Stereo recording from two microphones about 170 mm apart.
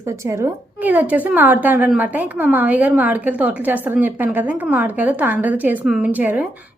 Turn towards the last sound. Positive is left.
turn(degrees=-10)  # may be behind; listen again after turning